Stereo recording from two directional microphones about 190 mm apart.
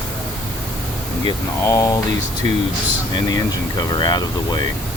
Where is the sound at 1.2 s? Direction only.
15° left (ahead or behind).